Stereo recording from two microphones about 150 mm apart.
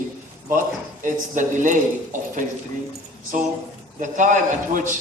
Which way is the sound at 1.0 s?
60° right (ahead or behind).